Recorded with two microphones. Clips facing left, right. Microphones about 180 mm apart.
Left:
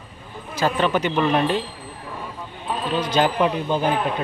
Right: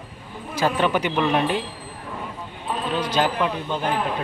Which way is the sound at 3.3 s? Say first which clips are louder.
Left 4 dB; 20° left (ahead or behind).